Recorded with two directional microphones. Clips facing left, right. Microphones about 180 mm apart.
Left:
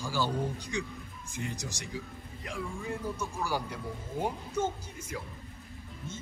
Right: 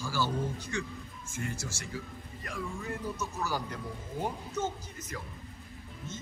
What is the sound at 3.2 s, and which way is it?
A man's voice, 10° left (ahead or behind).